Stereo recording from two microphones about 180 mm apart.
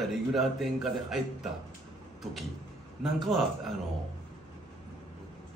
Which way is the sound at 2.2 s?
Centre (ahead or behind).